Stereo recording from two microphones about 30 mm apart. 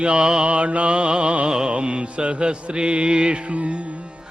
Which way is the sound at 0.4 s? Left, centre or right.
Right.